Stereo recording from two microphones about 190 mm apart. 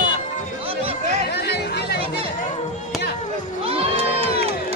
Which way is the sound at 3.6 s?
30° right (ahead or behind).